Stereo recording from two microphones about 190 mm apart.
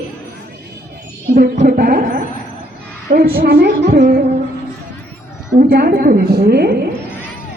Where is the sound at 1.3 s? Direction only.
50° right (ahead or behind).